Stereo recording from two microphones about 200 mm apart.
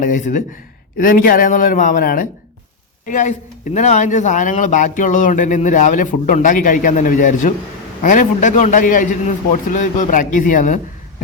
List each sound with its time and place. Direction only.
0.0 s a man's voice: 40° left (ahead or behind)